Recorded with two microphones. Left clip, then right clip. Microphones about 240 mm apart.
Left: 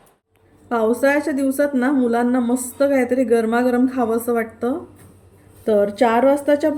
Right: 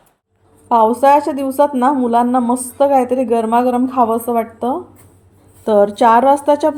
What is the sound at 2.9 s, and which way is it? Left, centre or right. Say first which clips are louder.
Speech: right 6 dB; right.